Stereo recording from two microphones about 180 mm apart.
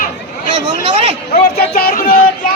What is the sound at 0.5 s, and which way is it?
Speech, 25° right (ahead or behind).